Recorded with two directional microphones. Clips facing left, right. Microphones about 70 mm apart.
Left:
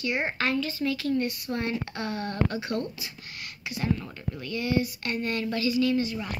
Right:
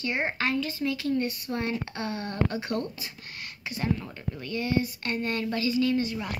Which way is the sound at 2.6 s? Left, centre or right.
Right.